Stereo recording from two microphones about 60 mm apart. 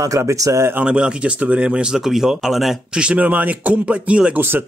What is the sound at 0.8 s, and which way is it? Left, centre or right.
Speech, centre.